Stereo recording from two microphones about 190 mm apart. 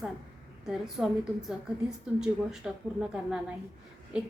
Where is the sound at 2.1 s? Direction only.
5° right (ahead or behind).